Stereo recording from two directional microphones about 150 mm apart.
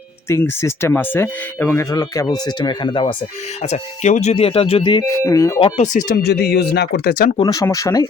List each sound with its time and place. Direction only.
0.3 s speech: 20° left (ahead or behind)
3.6 s speech: 50° left (ahead or behind); by 5.0 s 30° left (ahead or behind)
5.0 s speech: 20° left (ahead or behind)
5.5 s speech: 35° left (ahead or behind)
5.8 s speech: 60° left (ahead or behind); by 7.3 s 85° left
7.3 s speech: 25° left (ahead or behind)